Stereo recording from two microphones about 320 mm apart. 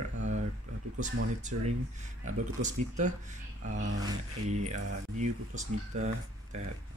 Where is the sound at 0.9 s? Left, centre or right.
Right.